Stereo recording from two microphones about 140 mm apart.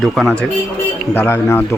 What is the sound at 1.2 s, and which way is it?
Speech, 15° left (ahead or behind).